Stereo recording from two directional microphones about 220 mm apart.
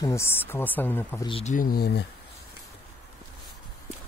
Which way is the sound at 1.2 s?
30° left (ahead or behind).